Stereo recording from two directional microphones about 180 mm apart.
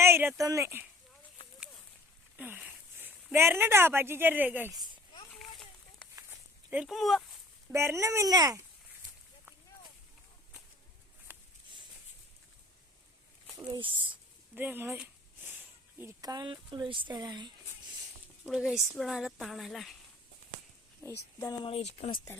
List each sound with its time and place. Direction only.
0.0 s speech: 15° right (ahead or behind)
1.5 s a sound: centre (ahead or behind)
3.3 s speech: 10° right (ahead or behind)
5.3 s a sound: 5° left (ahead or behind)
6.7 s speech: 5° right (ahead or behind)
7.7 s speech: 15° right (ahead or behind)
13.7 s speech: 25° right (ahead or behind)
14.1 s a sound: 10° right (ahead or behind)
18.4 s speech: 5° right (ahead or behind)
21.0 s speech: 15° left (ahead or behind)
21.6 s speech: 35° left (ahead or behind)